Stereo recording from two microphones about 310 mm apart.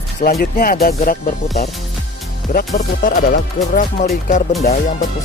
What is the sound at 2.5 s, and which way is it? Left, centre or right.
Speech, left.